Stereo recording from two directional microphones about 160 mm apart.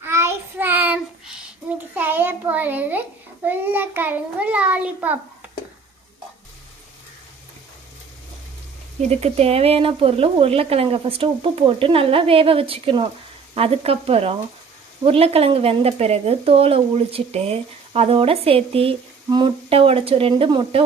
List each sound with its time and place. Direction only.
0.0 s child singing: 15° right (ahead or behind)
2.0 s a sound: 10° right (ahead or behind)
3.4 s a child's voice: 10° right (ahead or behind)
9.0 s speech: 40° right (ahead or behind)